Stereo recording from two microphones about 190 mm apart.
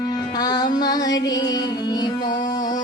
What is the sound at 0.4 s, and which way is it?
Music, 20° left (ahead or behind).